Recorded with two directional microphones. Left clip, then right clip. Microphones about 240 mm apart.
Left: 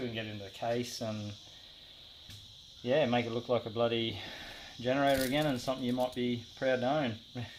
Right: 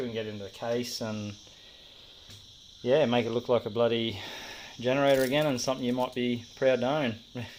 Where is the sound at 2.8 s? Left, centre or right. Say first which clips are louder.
Right 5 dB; right.